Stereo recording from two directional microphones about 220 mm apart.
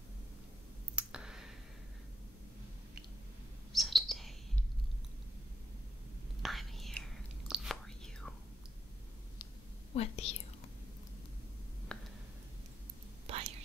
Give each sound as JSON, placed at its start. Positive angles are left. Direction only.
{"t": 0.9, "sound": "clicking", "side_deg": -5}
{"t": 3.7, "sound": "chirp", "side_deg": 0}
{"t": 6.4, "sound": "whispering", "side_deg": 0}
{"t": 9.9, "sound": "whispering", "side_deg": 25}
{"t": 11.9, "sound": "a sound", "side_deg": 5}
{"t": 13.3, "sound": "whispering", "side_deg": -25}